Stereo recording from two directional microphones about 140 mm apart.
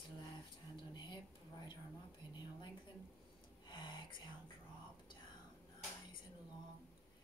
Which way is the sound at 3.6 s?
35° left (ahead or behind).